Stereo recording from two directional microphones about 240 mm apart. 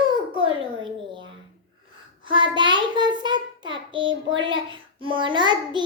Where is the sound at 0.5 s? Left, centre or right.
Right.